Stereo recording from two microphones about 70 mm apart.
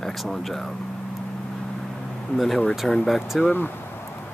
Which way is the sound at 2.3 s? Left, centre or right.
Centre.